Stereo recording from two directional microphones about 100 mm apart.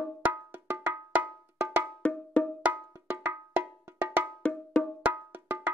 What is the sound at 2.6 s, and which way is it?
Cowbell, 15° right (ahead or behind).